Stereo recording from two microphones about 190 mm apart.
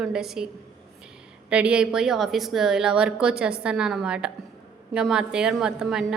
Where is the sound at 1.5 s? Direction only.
5° right (ahead or behind).